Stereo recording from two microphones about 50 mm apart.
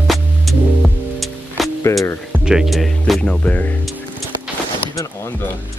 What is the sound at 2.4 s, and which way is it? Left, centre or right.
Speech, centre.